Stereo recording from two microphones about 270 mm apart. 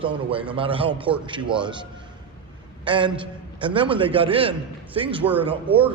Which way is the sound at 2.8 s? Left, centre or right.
Centre.